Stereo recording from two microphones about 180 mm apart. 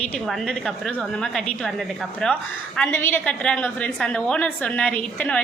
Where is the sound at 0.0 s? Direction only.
5° left (ahead or behind).